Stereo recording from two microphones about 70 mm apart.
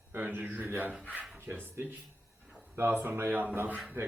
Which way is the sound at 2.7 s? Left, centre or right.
Right.